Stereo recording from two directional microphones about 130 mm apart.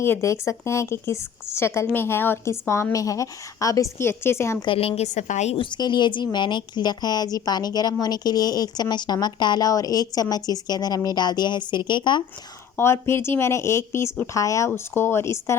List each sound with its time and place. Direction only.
0.0 s a woman's voice: 20° left (ahead or behind)
4.6 s a woman's voice: 45° left (ahead or behind)
5.0 s a woman's voice: 65° left (ahead or behind)
5.5 s a woman's voice: 35° left (ahead or behind)
12.7 s a woman's voice: 20° left (ahead or behind)